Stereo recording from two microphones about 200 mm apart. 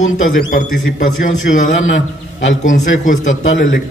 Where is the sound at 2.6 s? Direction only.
40° left (ahead or behind).